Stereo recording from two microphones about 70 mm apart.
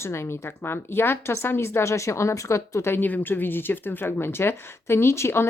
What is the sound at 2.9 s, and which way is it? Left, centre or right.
Speech, left.